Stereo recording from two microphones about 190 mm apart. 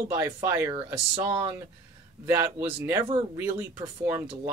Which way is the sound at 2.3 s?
15° right (ahead or behind).